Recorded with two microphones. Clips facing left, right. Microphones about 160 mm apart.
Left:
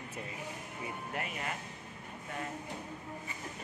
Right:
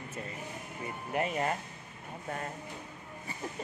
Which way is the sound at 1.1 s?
15° right (ahead or behind).